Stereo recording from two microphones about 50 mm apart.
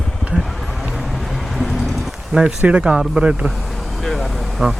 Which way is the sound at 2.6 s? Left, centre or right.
Right.